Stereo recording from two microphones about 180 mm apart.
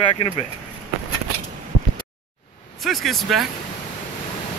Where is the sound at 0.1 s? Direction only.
30° left (ahead or behind).